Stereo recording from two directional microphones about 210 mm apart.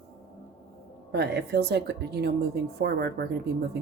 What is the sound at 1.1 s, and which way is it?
Speech, 50° right (ahead or behind).